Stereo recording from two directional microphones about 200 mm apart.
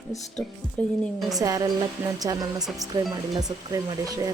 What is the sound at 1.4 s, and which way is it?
Speech, 15° right (ahead or behind).